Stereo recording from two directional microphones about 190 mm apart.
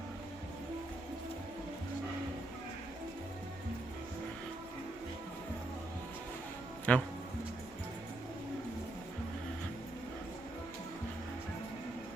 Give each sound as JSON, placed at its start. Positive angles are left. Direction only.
{"t": 6.9, "sound": "speech", "side_deg": 5}